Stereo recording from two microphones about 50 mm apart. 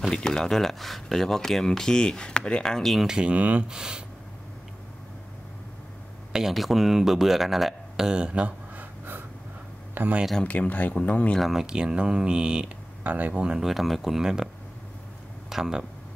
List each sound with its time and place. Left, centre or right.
0.1 s speech: centre
3.1 s speech: centre
3.3 s speech: right
3.6 s speech: centre
6.3 s speech: centre
8.1 s speech: right
8.7 s gasp: right
10.0 s speech: right
10.4 s speech: left
11.5 s speech: centre
13.0 s speech: right
13.4 s speech: centre
13.7 s speech: centre
15.5 s speech: centre